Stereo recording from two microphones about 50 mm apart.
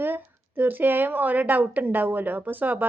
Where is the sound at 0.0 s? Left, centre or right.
Right.